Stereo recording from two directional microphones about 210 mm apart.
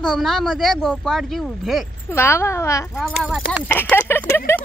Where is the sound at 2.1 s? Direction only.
10° left (ahead or behind).